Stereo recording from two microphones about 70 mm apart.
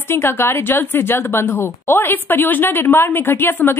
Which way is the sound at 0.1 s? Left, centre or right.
Left.